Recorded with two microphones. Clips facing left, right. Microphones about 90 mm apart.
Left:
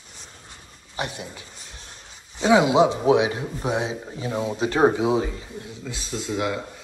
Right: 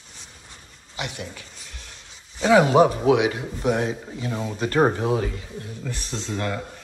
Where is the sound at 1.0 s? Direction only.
30° left (ahead or behind).